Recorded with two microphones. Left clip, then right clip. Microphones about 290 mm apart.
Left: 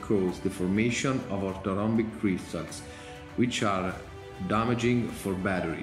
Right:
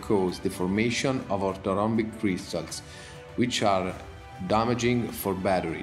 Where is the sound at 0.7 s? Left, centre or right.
Centre.